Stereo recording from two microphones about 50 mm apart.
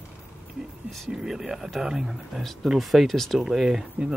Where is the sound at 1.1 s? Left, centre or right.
Centre.